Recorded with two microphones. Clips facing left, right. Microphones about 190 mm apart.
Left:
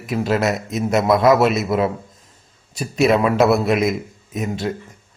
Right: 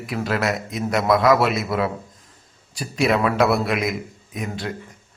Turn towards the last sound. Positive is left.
turn(degrees=25)  # may be behind; listen again after turning